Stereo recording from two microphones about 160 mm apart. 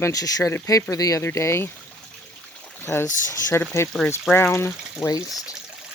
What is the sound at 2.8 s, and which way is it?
Speech, 15° left (ahead or behind).